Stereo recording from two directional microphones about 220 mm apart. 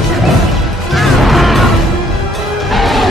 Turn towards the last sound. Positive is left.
turn(degrees=0)  # may be behind; listen again after turning